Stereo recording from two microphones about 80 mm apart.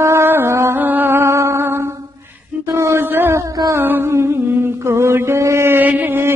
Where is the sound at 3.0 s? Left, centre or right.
Right.